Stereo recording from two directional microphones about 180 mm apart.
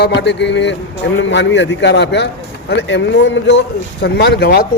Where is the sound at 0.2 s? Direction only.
75° left (ahead or behind).